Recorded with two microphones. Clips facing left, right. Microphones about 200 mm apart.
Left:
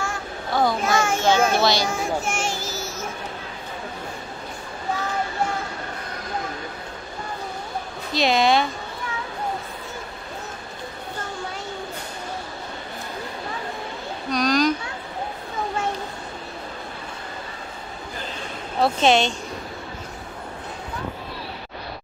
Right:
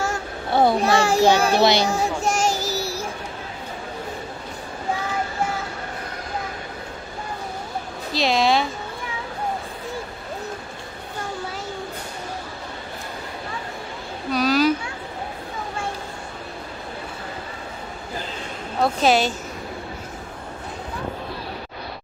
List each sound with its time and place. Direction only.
0.5 s a child's voice: 30° right (ahead or behind)
1.9 s child singing: 40° right (ahead or behind)
8.1 s speech: centre (ahead or behind)
14.3 s a sound: 5° right (ahead or behind)
18.8 s a woman's voice: 5° right (ahead or behind)